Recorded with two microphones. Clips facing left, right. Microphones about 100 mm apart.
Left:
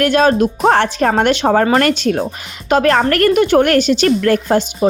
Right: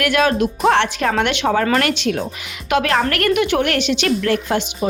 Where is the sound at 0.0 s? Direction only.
35° left (ahead or behind).